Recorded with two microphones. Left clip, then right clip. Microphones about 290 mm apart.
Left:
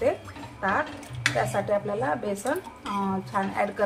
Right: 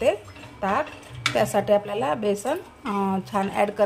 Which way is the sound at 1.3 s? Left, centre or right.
Right.